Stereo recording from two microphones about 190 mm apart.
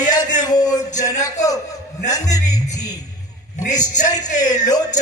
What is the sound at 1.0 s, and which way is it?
Speech, 20° left (ahead or behind).